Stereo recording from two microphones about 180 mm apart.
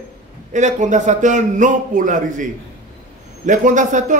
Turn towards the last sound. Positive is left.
turn(degrees=-45)  # may be behind; listen again after turning